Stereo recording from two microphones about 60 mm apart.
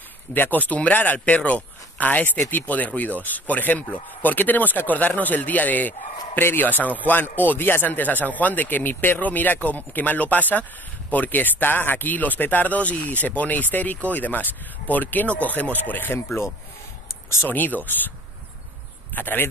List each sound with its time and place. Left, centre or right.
0.3 s speech: left
17.5 s speech: left
19.1 s speech: left